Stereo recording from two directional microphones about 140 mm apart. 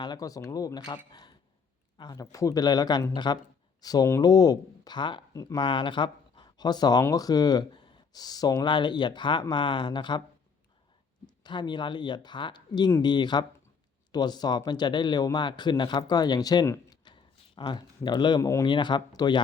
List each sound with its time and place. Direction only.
0.0 s speech: 30° left (ahead or behind)
2.0 s speech: 25° left (ahead or behind)
5.6 s speech: 35° left (ahead or behind)
11.4 s speech: 30° left (ahead or behind)